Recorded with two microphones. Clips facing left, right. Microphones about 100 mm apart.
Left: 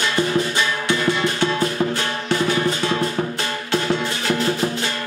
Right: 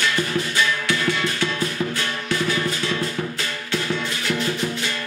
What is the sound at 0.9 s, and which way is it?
Music, 25° left (ahead or behind).